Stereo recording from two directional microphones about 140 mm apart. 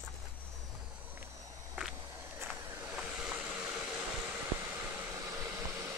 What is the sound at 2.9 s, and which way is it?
Waves, 5° right (ahead or behind).